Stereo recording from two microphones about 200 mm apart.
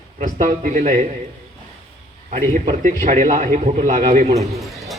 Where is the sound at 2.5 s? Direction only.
40° right (ahead or behind).